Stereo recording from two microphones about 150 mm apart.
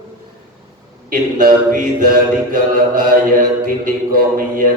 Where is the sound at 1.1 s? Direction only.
65° right (ahead or behind).